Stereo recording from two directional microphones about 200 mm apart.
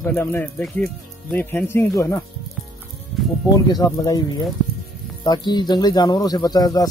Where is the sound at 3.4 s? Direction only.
20° left (ahead or behind).